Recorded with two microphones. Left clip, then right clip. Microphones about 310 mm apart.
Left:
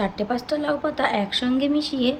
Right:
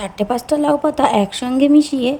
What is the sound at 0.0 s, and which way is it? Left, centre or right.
Speech, right.